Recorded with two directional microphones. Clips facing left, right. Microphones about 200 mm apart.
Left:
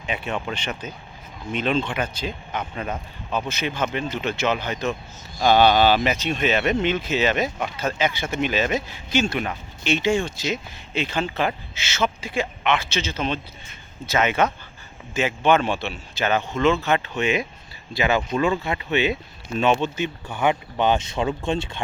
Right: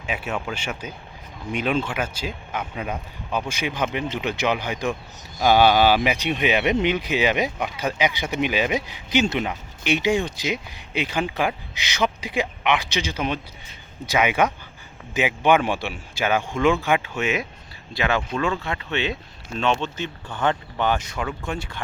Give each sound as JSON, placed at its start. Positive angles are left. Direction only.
{"t": 0.0, "sound": "speech", "side_deg": -5}